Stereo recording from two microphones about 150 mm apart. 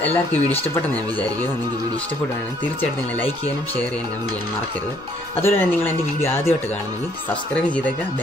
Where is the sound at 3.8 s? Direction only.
10° left (ahead or behind).